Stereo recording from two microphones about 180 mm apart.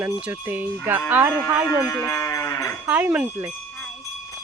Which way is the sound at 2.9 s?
10° right (ahead or behind).